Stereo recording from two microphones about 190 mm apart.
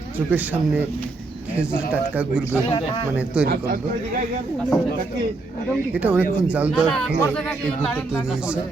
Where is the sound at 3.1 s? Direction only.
5° right (ahead or behind).